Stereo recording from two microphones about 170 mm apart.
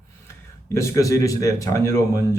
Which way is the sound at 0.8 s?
20° left (ahead or behind).